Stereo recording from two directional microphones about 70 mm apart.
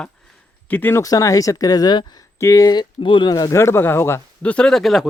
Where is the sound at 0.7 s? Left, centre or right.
Left.